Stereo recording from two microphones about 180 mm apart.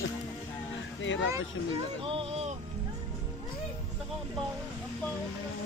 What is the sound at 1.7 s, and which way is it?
Speech, 30° right (ahead or behind).